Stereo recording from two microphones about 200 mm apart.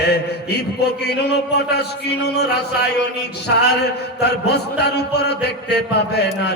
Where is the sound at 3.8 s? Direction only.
55° left (ahead or behind).